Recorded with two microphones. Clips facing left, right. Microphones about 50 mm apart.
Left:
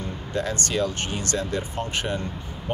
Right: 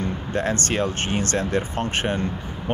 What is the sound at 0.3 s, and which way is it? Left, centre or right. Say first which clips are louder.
Speech: right 2 dB; right.